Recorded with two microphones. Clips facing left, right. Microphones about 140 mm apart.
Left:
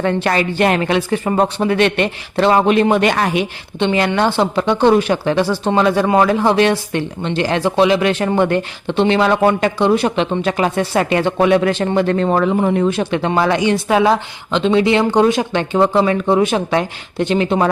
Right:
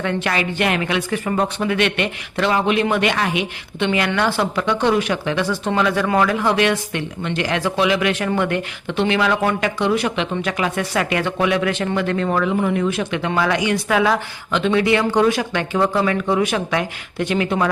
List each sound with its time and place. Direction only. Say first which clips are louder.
0.0 s speech: left 5 dB; 35° left (ahead or behind)
3.8 s speech: left 4 dB; 30° left (ahead or behind)